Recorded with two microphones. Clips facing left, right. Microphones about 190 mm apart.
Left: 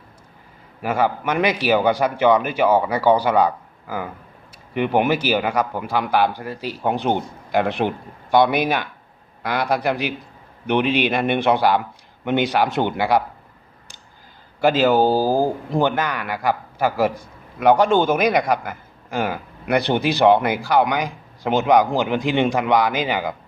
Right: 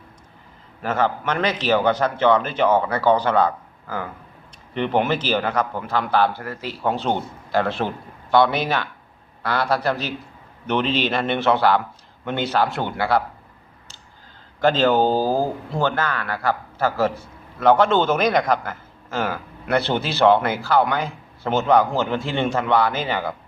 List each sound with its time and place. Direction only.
0.8 s speech: 10° left (ahead or behind)
14.6 s speech: 10° left (ahead or behind)